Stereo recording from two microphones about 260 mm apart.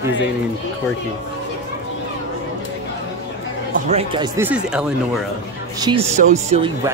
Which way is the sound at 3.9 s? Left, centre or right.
Right.